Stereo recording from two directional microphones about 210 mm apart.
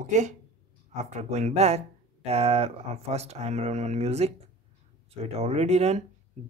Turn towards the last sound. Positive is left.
turn(degrees=-30)  # may be behind; listen again after turning